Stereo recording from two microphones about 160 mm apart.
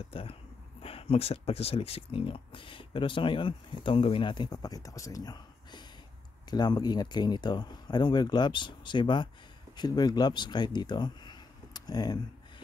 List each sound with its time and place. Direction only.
0.1 s speech: 35° left (ahead or behind)